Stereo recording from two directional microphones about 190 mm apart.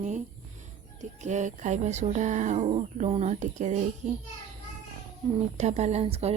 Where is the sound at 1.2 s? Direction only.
40° right (ahead or behind).